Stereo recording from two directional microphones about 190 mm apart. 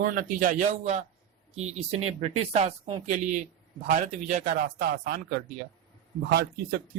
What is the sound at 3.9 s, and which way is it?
Speech, 40° right (ahead or behind).